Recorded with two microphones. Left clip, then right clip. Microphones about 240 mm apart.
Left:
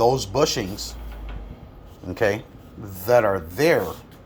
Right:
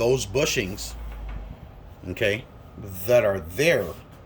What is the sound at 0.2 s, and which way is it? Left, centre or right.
Speech, centre.